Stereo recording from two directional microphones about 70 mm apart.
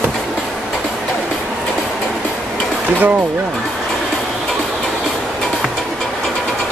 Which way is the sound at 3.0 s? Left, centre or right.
Right.